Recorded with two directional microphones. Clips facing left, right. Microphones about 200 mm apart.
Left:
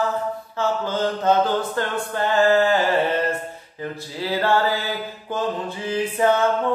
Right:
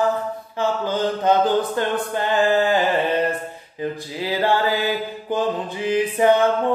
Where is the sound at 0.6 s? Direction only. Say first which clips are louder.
Right 1 dB; 15° right (ahead or behind).